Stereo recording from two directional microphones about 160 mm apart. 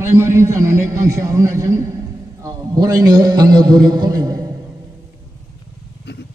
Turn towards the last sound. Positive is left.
turn(degrees=-25)  # may be behind; listen again after turning